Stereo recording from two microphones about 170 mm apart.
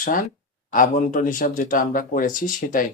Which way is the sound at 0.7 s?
50° left (ahead or behind).